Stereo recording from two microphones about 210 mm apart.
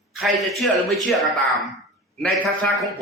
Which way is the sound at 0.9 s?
Centre (ahead or behind).